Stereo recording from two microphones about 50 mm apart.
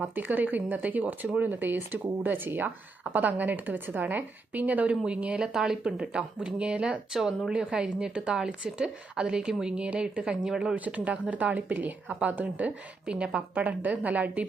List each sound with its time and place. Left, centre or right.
0.1 s speech: right
2.6 s speech: right
5.5 s speech: centre
10.8 s speech: right
13.1 s speech: centre